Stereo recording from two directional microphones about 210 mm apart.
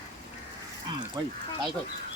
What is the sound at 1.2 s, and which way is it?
Speech, 15° right (ahead or behind).